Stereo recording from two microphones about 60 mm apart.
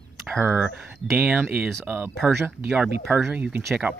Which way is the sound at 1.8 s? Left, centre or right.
Right.